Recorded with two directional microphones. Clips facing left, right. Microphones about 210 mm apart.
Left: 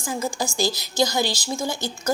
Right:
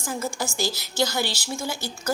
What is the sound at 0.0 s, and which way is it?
A woman's voice, 15° left (ahead or behind).